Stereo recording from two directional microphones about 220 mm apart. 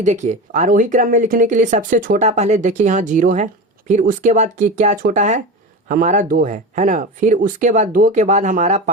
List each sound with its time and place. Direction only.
0.0 s speech: 35° right (ahead or behind)